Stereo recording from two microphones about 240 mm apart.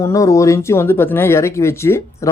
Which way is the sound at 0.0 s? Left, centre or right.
Centre.